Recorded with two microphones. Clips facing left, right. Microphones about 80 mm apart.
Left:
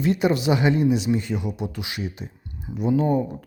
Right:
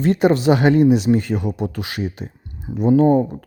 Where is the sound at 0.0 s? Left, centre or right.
Right.